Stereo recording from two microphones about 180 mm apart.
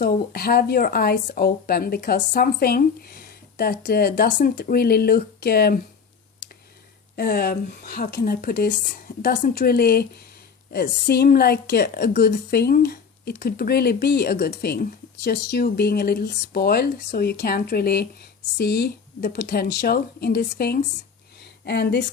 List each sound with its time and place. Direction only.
0.0 s a woman's voice: 55° left (ahead or behind)
7.2 s a woman's voice: 55° left (ahead or behind)